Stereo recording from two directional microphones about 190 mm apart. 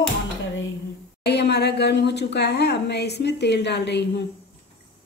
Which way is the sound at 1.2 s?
60° left (ahead or behind).